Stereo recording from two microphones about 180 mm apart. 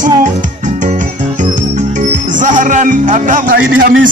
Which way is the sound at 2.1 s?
45° right (ahead or behind).